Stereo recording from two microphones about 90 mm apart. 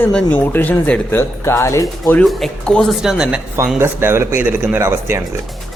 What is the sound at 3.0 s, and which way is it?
Speech, 5° right (ahead or behind).